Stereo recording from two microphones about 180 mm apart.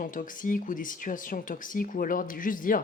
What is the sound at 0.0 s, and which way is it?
Speech, 50° left (ahead or behind).